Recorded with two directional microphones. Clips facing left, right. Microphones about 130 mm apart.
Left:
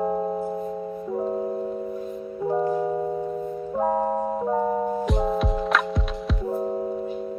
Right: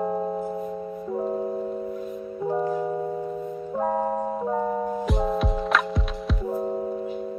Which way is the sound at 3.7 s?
10° left (ahead or behind).